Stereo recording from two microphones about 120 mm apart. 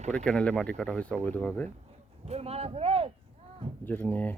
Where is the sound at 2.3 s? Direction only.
60° right (ahead or behind).